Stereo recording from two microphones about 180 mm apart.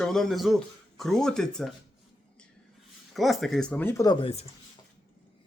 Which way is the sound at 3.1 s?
Centre (ahead or behind).